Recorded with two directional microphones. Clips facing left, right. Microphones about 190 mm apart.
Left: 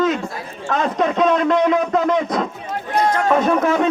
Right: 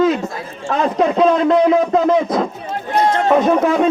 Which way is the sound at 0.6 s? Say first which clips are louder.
Right 3 dB; 30° right (ahead or behind).